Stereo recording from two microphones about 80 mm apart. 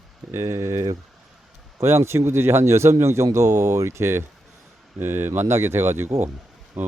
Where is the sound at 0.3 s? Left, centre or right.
Right.